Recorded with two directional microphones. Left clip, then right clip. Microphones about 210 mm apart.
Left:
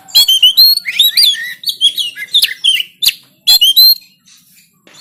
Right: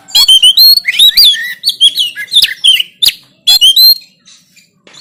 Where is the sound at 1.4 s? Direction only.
40° right (ahead or behind).